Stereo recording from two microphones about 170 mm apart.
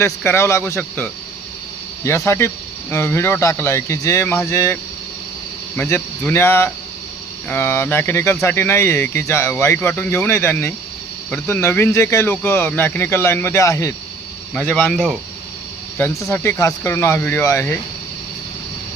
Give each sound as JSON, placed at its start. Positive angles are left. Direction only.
{"t": 0.0, "sound": "speech", "side_deg": 15}
{"t": 16.0, "sound": "speech", "side_deg": 15}